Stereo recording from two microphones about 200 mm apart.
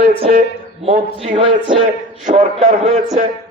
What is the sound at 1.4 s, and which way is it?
Speech, 25° right (ahead or behind).